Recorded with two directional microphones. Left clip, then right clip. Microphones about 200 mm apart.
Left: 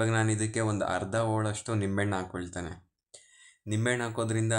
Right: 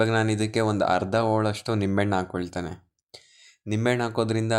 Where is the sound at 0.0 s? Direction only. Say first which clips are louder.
Right 6 dB; 30° right (ahead or behind).